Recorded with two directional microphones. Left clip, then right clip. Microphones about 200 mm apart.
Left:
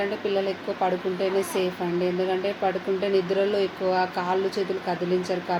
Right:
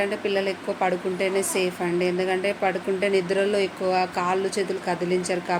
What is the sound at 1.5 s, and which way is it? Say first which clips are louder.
Speech: right 2 dB; 35° right (ahead or behind).